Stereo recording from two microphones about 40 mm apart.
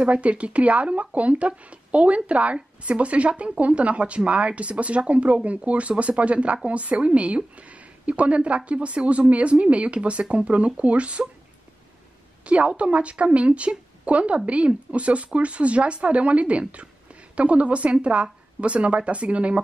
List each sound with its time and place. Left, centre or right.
0.0 s speech: right
12.4 s speech: right